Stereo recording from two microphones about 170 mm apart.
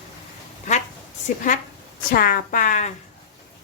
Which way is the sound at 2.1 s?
55° left (ahead or behind).